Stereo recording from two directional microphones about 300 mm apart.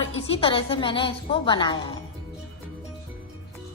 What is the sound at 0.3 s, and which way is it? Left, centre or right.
A woman's voice, centre.